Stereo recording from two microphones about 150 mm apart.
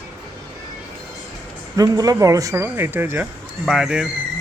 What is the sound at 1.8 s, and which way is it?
Speech, 25° right (ahead or behind).